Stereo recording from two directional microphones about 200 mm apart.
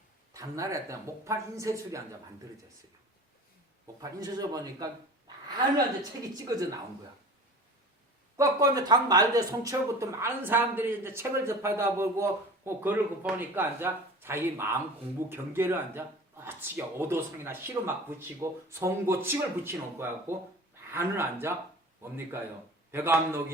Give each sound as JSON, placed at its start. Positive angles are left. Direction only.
{"t": 0.3, "sound": "speech", "side_deg": -15}
{"t": 4.0, "sound": "a woman's voice", "side_deg": -20}
{"t": 8.4, "sound": "speech", "side_deg": -15}